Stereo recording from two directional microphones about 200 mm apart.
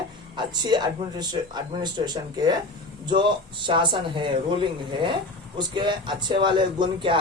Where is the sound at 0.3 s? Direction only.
20° right (ahead or behind).